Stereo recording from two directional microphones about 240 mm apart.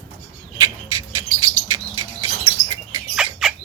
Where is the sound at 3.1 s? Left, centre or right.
Centre.